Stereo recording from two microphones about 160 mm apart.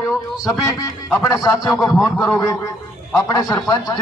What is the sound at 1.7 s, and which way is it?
Speech, centre (ahead or behind).